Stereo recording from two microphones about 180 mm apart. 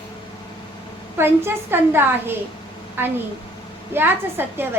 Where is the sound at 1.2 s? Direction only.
10° right (ahead or behind).